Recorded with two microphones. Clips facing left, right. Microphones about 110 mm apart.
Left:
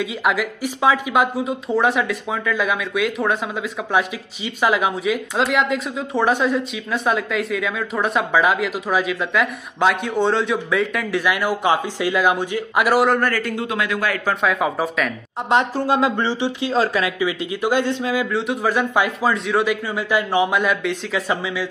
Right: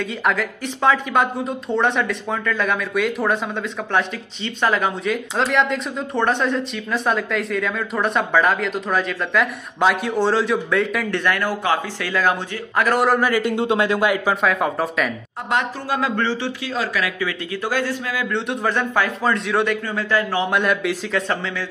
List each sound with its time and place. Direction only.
0.0 s speech: 5° left (ahead or behind)
4.6 s speech: 5° left (ahead or behind)
13.0 s speech: centre (ahead or behind)
13.3 s a man's voice: 25° right (ahead or behind)
14.0 s speech: 15° right (ahead or behind)
14.4 s speech: centre (ahead or behind)
15.5 s speech: 20° left (ahead or behind)
16.7 s speech: 30° left (ahead or behind)
18.3 s speech: 5° left (ahead or behind)
20.0 s speech: 15° left (ahead or behind)
20.5 s speech: centre (ahead or behind)